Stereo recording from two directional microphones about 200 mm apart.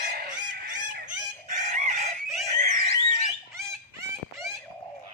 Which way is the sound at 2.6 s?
35° right (ahead or behind).